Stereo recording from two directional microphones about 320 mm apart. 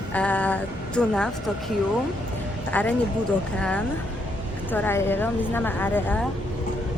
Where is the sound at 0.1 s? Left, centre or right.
Centre.